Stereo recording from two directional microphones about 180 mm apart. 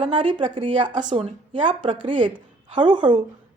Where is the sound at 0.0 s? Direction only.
30° right (ahead or behind).